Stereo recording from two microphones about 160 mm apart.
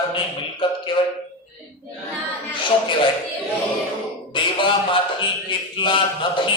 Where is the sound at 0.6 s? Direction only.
30° left (ahead or behind).